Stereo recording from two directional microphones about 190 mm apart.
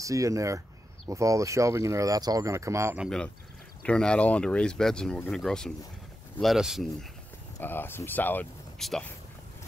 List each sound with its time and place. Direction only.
0.0 s speech: 15° right (ahead or behind)
3.8 s speech: 5° left (ahead or behind)
7.5 s speech: 10° left (ahead or behind)